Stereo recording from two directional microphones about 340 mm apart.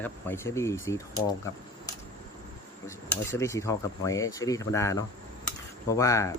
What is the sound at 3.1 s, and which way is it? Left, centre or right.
Speech, centre.